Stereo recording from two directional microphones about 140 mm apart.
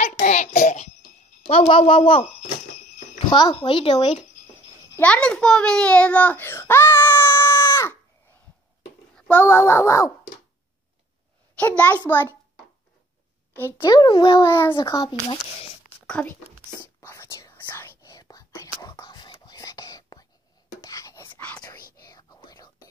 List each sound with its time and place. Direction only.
0.1 s child singing: 90° left
0.5 s a sound: 90° left
1.5 s speech: 40° left (ahead or behind)
3.3 s speech: 30° left (ahead or behind)
3.5 s speech: 40° left (ahead or behind)
4.9 s a sound: 10° left (ahead or behind)
9.1 s a child's voice: 15° left (ahead or behind)
11.5 s a child's voice: 10° left (ahead or behind)
13.5 s a child's voice: 15° left (ahead or behind)
13.8 s speech: 30° left (ahead or behind)
14.3 s a child's voice: 20° left (ahead or behind)
16.1 s a child's voice: 10° left (ahead or behind)
17.0 s whispering: 20° left (ahead or behind)
22.0 s whispering: 30° left (ahead or behind)